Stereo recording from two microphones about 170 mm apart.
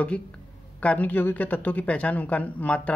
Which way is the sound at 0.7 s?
10° left (ahead or behind).